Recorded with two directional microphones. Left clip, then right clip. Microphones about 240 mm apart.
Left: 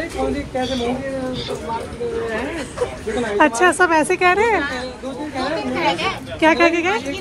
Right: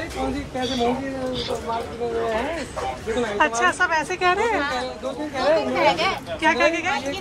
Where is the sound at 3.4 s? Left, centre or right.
Centre.